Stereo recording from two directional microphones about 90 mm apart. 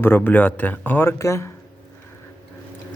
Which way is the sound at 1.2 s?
35° left (ahead or behind).